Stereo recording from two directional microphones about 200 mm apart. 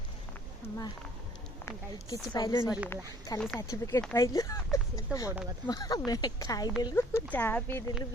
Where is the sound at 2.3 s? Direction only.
15° left (ahead or behind).